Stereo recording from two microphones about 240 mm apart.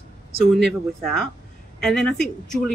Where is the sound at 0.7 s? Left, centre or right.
Centre.